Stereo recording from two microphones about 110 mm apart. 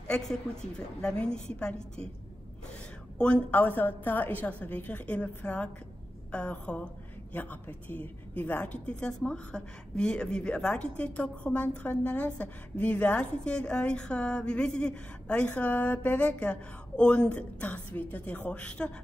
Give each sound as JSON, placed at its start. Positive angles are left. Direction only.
{"t": 0.1, "sound": "a woman's voice", "side_deg": 5}
{"t": 3.2, "sound": "a woman's voice", "side_deg": 10}